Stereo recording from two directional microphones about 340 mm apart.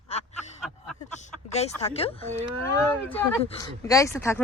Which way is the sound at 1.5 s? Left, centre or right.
Centre.